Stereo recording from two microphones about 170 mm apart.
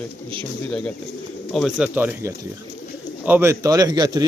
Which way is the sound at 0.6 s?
5° left (ahead or behind).